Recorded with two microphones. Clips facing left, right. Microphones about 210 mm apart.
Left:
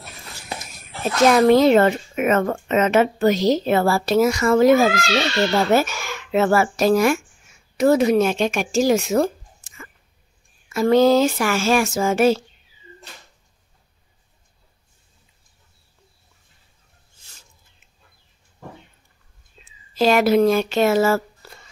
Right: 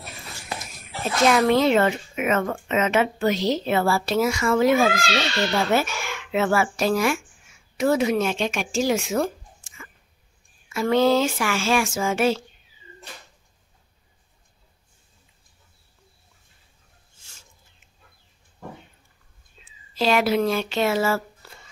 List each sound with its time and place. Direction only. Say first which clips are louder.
1.3 s a woman's voice: left 6 dB; 40° left (ahead or behind)
19.6 s speech: left 5 dB; 45° left (ahead or behind)